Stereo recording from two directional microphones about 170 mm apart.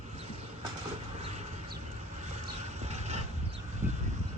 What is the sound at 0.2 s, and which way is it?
Vehicle, 35° right (ahead or behind).